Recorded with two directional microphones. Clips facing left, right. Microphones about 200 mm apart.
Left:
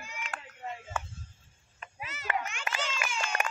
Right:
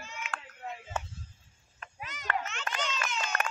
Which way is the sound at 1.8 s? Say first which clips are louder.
Left 1 dB; 5° left (ahead or behind).